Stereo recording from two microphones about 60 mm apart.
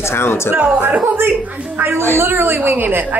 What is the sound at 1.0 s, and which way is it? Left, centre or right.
A woman's voice, right.